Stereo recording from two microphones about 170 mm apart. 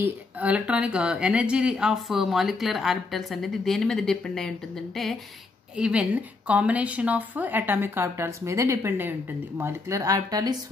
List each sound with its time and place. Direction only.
0.0 s a woman's voice: 10° right (ahead or behind)